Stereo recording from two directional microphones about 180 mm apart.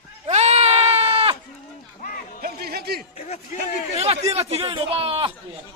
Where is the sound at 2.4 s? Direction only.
60° right (ahead or behind).